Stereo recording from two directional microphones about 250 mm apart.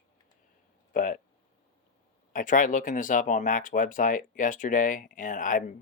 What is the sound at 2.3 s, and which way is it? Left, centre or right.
Speech, left.